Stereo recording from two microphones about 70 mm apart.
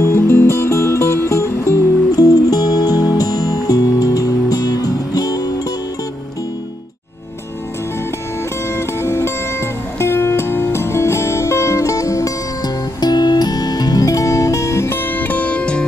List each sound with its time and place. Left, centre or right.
0.0 s music: left
2.1 s music: left
8.7 s music: left; by 15.8 s centre